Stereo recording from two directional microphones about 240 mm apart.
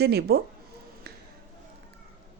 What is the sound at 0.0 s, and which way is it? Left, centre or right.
Speech, right.